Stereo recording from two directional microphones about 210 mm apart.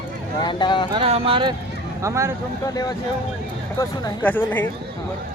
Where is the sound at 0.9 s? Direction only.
25° right (ahead or behind).